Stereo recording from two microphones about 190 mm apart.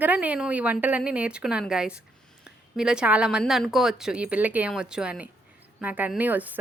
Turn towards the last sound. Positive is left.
turn(degrees=-10)  # may be behind; listen again after turning